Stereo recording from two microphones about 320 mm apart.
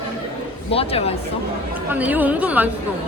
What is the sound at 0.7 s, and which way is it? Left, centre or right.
Speech, centre.